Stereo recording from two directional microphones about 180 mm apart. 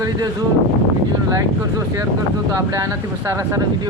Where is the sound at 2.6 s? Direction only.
20° right (ahead or behind).